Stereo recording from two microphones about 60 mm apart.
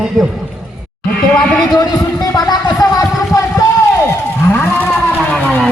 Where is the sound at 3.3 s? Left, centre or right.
Left.